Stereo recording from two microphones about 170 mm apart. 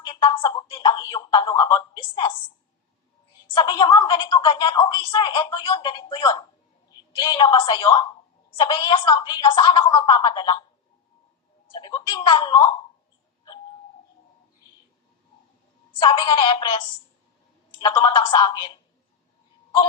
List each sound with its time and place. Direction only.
0.0 s speech: 30° left (ahead or behind)
3.4 s speech: 30° left (ahead or behind)
11.7 s speech: 25° left (ahead or behind)
16.0 s speech: 30° left (ahead or behind)